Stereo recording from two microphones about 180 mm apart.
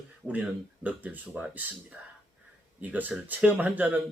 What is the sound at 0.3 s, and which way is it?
Speech, 10° right (ahead or behind).